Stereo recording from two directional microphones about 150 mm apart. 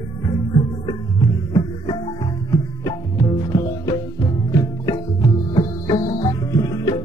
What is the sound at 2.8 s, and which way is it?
Music, 25° left (ahead or behind).